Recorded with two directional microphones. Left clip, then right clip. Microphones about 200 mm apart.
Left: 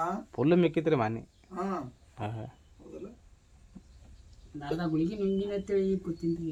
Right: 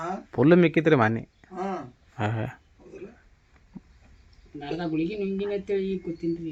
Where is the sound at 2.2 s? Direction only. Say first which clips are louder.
Right 9 dB; 25° right (ahead or behind).